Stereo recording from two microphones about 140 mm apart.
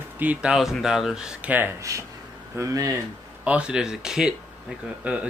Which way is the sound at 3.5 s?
5° right (ahead or behind).